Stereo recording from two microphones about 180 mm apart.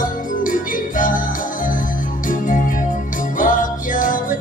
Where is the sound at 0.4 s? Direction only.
50° left (ahead or behind).